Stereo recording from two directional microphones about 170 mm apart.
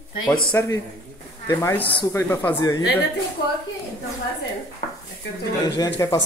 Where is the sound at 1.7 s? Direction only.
10° left (ahead or behind).